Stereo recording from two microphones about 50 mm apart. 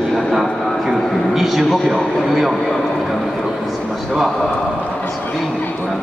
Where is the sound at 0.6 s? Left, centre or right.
Centre.